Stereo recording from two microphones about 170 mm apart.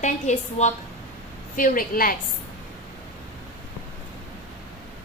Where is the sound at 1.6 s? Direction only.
55° left (ahead or behind).